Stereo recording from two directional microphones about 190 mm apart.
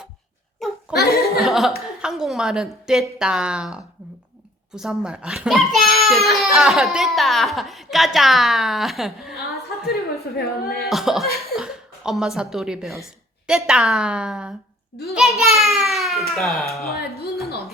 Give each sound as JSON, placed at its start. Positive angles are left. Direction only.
{"t": 0.6, "sound": "laughter", "side_deg": 0}
{"t": 1.4, "sound": "chuckle", "side_deg": 0}
{"t": 2.0, "sound": "a child's voice", "side_deg": -5}
{"t": 9.9, "sound": "a woman's voice", "side_deg": 55}
{"t": 10.8, "sound": "a child's voice", "side_deg": 0}